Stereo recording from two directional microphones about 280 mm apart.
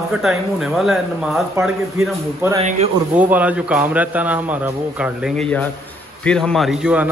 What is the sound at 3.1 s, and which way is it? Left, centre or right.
A man's voice, centre.